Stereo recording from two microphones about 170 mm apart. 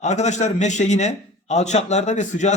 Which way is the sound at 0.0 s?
45° left (ahead or behind).